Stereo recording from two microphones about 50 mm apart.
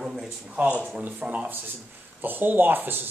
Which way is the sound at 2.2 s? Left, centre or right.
Right.